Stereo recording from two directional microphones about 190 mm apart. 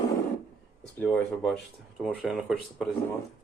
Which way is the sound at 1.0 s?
5° left (ahead or behind).